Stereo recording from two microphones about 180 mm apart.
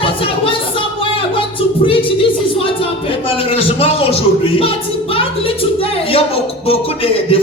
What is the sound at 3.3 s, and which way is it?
A man's voice, 30° left (ahead or behind).